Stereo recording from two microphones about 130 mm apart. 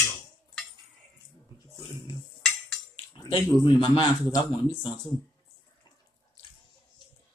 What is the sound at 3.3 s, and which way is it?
Speech, 40° left (ahead or behind).